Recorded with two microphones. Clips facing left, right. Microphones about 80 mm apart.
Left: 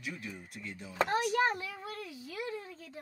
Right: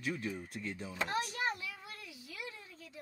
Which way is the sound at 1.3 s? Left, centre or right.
Left.